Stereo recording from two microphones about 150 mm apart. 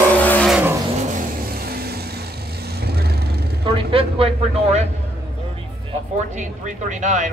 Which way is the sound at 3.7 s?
35° right (ahead or behind).